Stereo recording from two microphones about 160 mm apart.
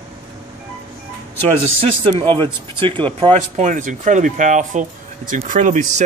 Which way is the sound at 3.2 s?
45° right (ahead or behind).